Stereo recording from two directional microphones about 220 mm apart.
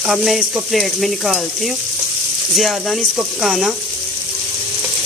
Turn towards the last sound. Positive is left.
turn(degrees=0)  # may be behind; listen again after turning